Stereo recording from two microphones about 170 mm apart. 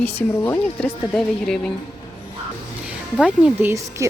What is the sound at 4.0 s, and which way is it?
Speech, 15° right (ahead or behind).